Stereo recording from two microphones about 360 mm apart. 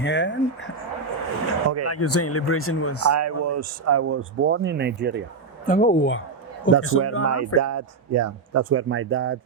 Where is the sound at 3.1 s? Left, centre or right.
Right.